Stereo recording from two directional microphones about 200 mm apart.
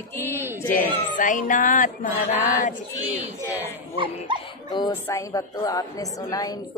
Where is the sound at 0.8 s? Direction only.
40° left (ahead or behind).